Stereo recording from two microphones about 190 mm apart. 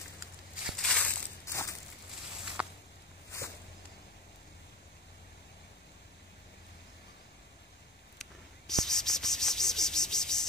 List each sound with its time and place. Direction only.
0.7 s crushing: centre (ahead or behind)
1.4 s a sound: 15° left (ahead or behind)
2.6 s walk: 5° right (ahead or behind)
8.2 s cricket: centre (ahead or behind)